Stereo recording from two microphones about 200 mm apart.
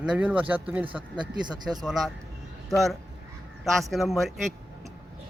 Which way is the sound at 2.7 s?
Centre (ahead or behind).